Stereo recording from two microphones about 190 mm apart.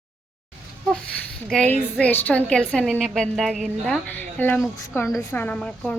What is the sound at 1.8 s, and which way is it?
A woman's voice, 5° left (ahead or behind).